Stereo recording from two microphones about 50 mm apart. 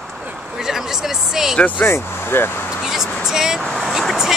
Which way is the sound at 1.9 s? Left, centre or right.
Left.